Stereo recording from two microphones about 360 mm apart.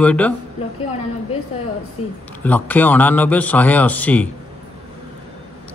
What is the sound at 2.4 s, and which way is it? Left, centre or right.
A man's voice, centre.